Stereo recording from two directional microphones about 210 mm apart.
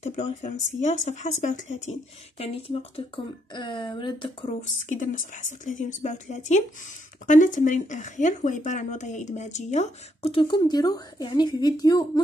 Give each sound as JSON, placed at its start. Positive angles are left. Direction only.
{"t": 0.0, "sound": "speech", "side_deg": 35}